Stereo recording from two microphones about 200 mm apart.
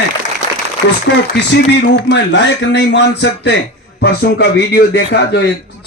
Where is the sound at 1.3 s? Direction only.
60° left (ahead or behind).